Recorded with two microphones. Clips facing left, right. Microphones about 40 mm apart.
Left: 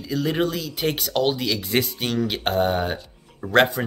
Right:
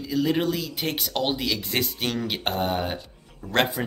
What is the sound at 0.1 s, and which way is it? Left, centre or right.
Speech, centre.